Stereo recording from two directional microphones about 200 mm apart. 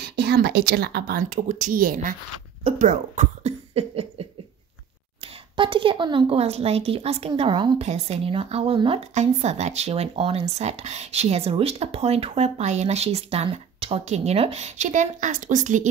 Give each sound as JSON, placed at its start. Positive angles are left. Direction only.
{"t": 0.0, "sound": "speech", "side_deg": -55}